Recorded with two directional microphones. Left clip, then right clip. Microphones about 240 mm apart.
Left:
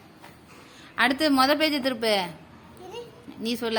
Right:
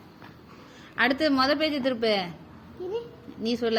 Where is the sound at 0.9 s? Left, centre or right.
Left.